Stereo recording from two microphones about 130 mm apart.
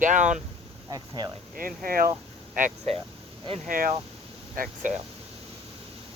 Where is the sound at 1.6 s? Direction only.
90° right.